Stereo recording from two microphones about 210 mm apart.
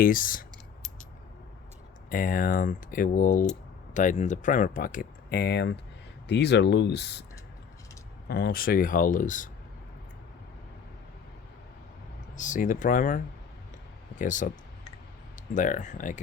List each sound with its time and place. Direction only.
0.0 s speech: 40° left (ahead or behind)
2.0 s speech: 40° left (ahead or behind)
8.3 s speech: 45° left (ahead or behind)
12.4 s speech: 40° left (ahead or behind)
15.5 s speech: 35° left (ahead or behind)